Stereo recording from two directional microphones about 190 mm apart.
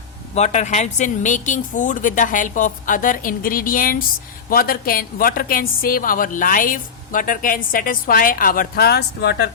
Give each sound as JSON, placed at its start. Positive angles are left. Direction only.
{"t": 0.3, "sound": "a woman's voice", "side_deg": 35}